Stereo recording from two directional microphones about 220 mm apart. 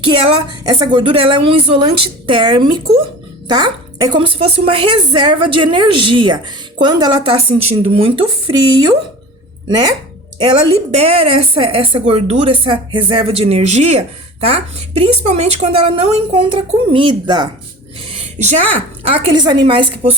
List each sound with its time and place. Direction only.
0.1 s a woman's voice: 20° right (ahead or behind)
18.0 s a sound: 30° right (ahead or behind)
19.0 s a woman's voice: 20° right (ahead or behind)